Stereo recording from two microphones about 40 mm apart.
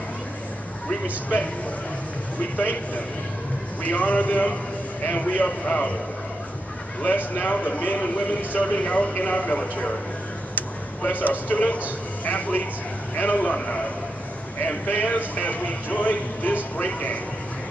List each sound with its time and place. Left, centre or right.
1.0 s a man's voice: left
2.5 s a man's voice: left
7.2 s a man's voice: left
11.1 s a man's voice: left
14.9 s a man's voice: left